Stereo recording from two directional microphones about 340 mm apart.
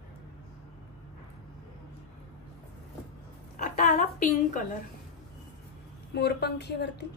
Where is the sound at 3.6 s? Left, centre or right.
Left.